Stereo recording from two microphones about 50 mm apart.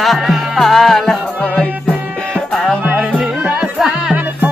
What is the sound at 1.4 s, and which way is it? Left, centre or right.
Music, left.